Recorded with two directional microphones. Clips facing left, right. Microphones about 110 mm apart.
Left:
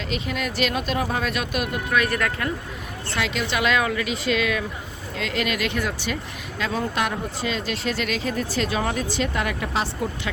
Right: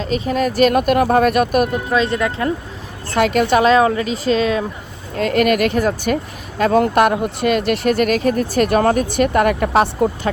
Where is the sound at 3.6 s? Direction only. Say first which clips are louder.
Right 9 dB; 35° right (ahead or behind).